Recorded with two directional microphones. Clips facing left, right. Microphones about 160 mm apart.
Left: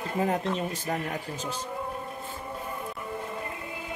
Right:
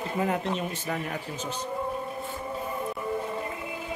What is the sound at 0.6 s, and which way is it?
Speech, 35° left (ahead or behind).